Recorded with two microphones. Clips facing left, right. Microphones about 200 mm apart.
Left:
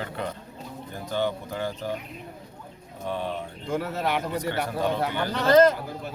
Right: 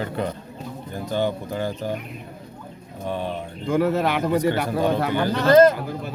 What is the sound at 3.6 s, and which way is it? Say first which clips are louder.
Speech: right 8 dB; 90° right.